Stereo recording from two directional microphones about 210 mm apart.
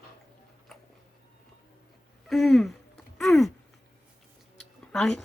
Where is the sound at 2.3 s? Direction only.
Centre (ahead or behind).